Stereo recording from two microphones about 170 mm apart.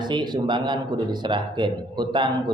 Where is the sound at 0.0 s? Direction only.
25° right (ahead or behind).